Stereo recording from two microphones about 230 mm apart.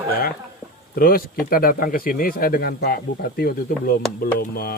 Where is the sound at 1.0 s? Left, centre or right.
Left.